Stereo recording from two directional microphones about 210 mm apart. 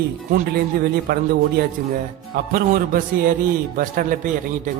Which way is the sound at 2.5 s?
45° right (ahead or behind).